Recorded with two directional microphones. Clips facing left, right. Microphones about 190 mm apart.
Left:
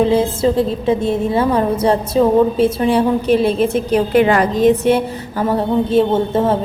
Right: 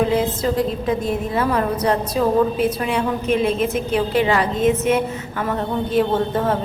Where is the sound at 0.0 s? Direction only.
25° left (ahead or behind).